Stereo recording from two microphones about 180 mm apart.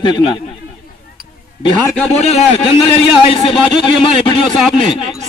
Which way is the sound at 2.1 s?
35° left (ahead or behind).